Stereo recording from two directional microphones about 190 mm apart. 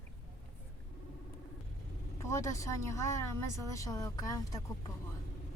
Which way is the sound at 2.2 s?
15° left (ahead or behind).